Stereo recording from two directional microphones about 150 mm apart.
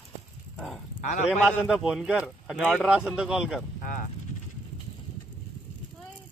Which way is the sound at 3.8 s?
60° left (ahead or behind).